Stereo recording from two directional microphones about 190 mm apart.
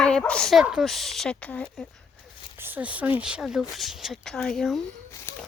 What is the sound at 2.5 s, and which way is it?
Speech, 10° right (ahead or behind).